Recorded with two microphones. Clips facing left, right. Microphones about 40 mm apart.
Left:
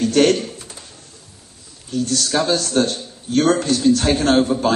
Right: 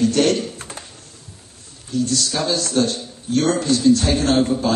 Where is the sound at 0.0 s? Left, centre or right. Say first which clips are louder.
Left 2 dB; left.